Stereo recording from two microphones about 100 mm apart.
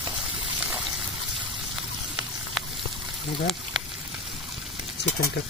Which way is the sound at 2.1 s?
Centre (ahead or behind).